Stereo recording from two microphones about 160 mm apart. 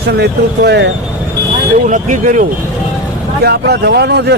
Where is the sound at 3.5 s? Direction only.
90° right.